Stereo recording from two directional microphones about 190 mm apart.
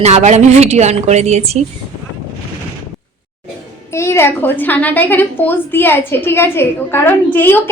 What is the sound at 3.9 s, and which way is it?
A woman's voice, 15° left (ahead or behind).